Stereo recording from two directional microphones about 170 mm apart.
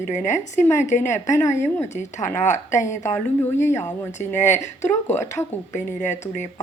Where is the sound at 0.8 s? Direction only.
45° left (ahead or behind).